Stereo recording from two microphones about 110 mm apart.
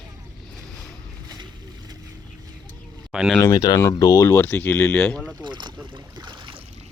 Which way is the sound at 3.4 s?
35° left (ahead or behind).